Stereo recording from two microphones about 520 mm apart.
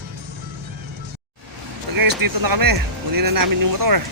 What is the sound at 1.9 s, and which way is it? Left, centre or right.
Speech, right.